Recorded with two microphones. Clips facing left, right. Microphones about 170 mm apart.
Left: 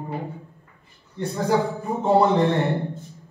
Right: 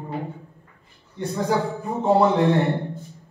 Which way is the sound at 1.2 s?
Centre (ahead or behind).